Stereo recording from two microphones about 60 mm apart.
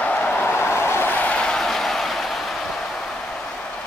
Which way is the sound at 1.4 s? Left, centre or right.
Centre.